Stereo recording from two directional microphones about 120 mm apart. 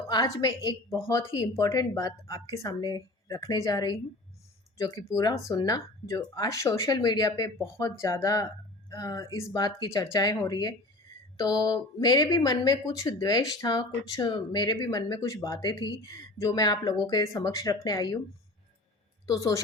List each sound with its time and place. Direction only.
0.1 s a woman's voice: 35° left (ahead or behind)
10.5 s speech: 45° left (ahead or behind)
11.3 s speech: 30° left (ahead or behind)
15.1 s a woman's voice: 30° left (ahead or behind)
19.2 s a woman's voice: 30° left (ahead or behind)